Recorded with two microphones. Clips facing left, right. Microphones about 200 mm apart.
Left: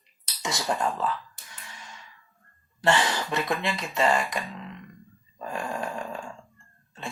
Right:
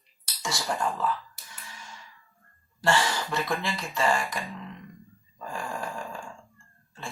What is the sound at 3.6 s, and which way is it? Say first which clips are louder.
Speech: left 2 dB; 20° left (ahead or behind).